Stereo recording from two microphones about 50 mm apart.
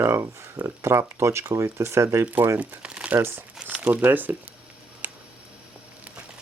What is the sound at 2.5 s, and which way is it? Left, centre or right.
Crumpling, right.